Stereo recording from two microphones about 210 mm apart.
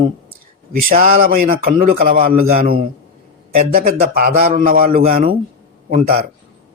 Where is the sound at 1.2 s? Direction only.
45° right (ahead or behind).